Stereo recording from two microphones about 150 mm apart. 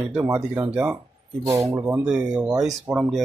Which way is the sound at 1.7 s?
20° right (ahead or behind).